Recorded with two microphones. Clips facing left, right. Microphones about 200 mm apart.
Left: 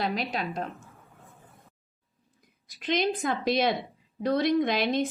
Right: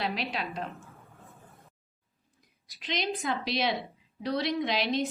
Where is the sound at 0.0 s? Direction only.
45° left (ahead or behind).